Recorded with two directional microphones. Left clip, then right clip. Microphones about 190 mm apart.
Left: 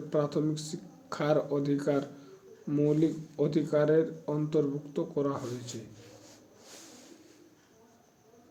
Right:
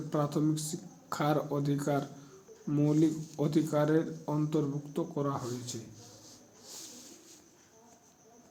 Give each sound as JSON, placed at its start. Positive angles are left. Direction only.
{"t": 0.1, "sound": "speech", "side_deg": -15}